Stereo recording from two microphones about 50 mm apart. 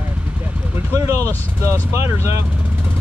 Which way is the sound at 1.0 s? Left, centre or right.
Right.